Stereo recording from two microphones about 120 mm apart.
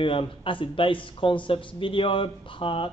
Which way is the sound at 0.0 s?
45° left (ahead or behind).